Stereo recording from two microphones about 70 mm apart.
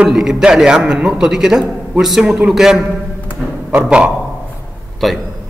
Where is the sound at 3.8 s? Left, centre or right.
Centre.